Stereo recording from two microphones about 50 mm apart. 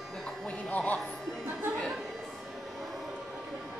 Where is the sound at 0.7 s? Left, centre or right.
Left.